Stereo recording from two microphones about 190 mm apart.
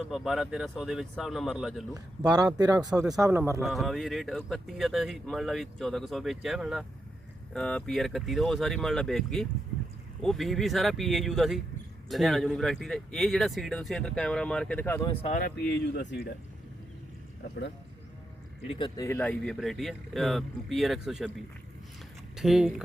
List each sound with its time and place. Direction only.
0.1 s speech: centre (ahead or behind)
2.2 s speech: 20° right (ahead or behind)
3.6 s speech: centre (ahead or behind)
15.4 s speech: 60° left (ahead or behind)
18.8 s speech: 15° left (ahead or behind); by 21.3 s centre (ahead or behind)
22.4 s speech: centre (ahead or behind)